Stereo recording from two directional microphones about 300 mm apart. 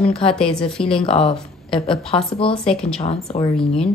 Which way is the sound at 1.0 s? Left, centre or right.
Centre.